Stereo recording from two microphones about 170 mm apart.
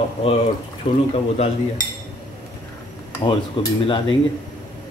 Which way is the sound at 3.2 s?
30° left (ahead or behind).